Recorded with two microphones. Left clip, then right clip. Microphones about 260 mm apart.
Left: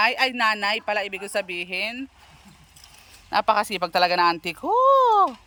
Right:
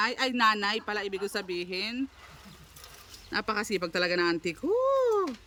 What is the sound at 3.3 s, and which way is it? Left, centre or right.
Speech, centre.